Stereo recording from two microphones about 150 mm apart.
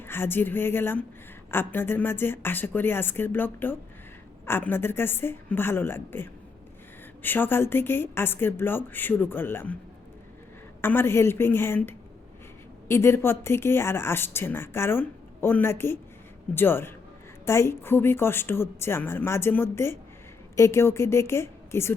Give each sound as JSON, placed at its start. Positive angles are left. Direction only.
{"t": 0.0, "sound": "a woman's voice", "side_deg": 15}
{"t": 10.8, "sound": "a woman's voice", "side_deg": 15}